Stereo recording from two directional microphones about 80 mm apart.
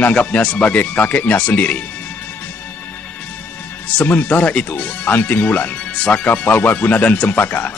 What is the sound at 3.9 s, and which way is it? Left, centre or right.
Speech, left.